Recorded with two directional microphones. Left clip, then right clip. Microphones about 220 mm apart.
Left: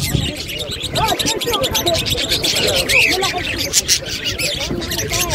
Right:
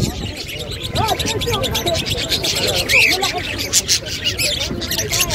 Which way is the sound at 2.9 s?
50° right (ahead or behind).